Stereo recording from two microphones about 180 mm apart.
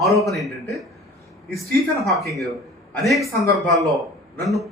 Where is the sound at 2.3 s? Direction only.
Centre (ahead or behind).